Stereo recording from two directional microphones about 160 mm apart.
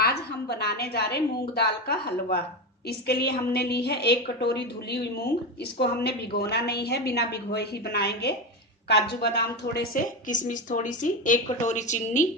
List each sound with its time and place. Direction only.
0.0 s a woman's voice: 90° left
10.2 s speech: 55° left (ahead or behind)